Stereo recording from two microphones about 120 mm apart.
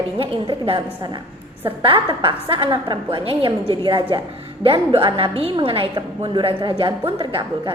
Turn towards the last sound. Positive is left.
turn(degrees=-40)  # may be behind; listen again after turning